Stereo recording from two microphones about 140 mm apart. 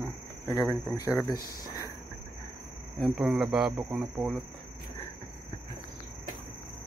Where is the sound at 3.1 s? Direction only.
5° right (ahead or behind).